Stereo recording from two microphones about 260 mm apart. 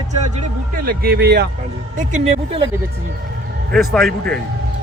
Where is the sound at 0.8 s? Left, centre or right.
Right.